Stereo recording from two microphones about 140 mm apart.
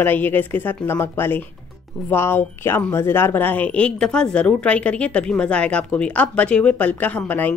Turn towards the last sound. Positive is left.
turn(degrees=10)  # may be behind; listen again after turning